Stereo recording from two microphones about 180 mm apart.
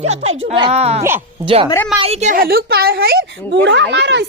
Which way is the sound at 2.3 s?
55° right (ahead or behind).